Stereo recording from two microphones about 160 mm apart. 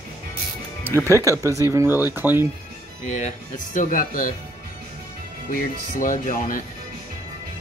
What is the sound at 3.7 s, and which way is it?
Speech, 55° left (ahead or behind).